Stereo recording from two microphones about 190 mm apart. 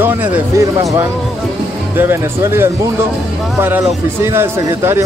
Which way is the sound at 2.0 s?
15° right (ahead or behind).